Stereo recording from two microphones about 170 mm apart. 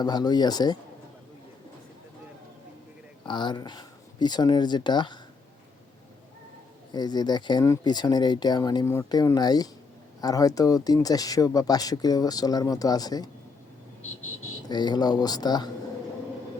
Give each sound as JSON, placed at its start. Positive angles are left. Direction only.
{"t": 0.0, "sound": "speech", "side_deg": 25}
{"t": 3.2, "sound": "speech", "side_deg": 25}
{"t": 6.9, "sound": "speech", "side_deg": 25}
{"t": 14.7, "sound": "speech", "side_deg": 25}